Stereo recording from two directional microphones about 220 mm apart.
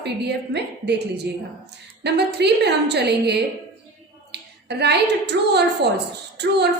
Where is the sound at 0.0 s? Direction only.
50° right (ahead or behind).